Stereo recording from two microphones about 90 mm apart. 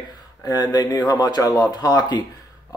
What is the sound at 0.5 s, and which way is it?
Speech, 45° left (ahead or behind).